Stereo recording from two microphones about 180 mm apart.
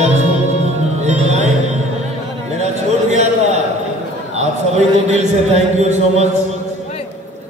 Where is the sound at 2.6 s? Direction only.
40° right (ahead or behind).